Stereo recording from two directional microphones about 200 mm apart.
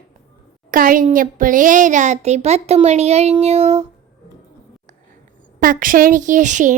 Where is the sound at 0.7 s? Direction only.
45° right (ahead or behind).